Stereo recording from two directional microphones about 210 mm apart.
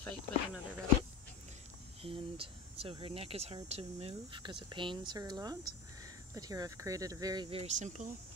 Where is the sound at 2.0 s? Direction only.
25° right (ahead or behind).